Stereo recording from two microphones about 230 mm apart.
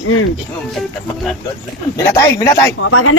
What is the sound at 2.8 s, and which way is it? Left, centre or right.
Speech, left.